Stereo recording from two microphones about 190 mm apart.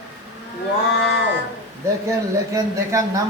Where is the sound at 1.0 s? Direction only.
70° left (ahead or behind).